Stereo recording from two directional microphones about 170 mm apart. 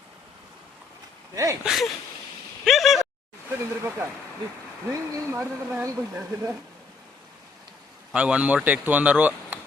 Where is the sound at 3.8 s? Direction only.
15° right (ahead or behind).